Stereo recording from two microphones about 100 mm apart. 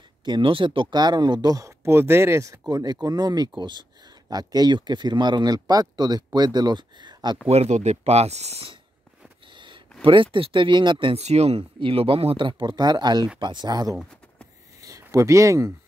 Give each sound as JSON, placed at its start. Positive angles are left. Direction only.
{"t": 0.2, "sound": "speech", "side_deg": -55}
{"t": 1.9, "sound": "speech", "side_deg": -25}
{"t": 2.7, "sound": "speech", "side_deg": -40}
{"t": 7.4, "sound": "speech", "side_deg": -90}
{"t": 10.0, "sound": "speech", "side_deg": -60}
{"t": 11.1, "sound": "speech", "side_deg": -90}
{"t": 12.4, "sound": "speech", "side_deg": -55}
{"t": 14.8, "sound": "a sound", "side_deg": -30}